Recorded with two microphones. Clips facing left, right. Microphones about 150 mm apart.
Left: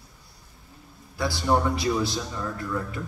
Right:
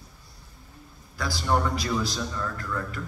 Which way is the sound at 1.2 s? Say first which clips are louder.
Left 3 dB; 25° left (ahead or behind).